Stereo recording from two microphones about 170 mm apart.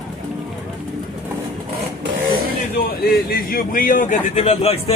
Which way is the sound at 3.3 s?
55° left (ahead or behind).